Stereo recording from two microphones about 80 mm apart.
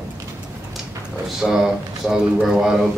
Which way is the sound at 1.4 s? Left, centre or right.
Centre.